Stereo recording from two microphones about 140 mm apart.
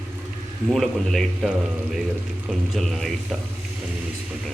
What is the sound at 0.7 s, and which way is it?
Speech, centre (ahead or behind).